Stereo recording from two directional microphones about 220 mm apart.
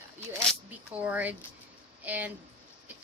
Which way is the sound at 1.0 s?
5° right (ahead or behind).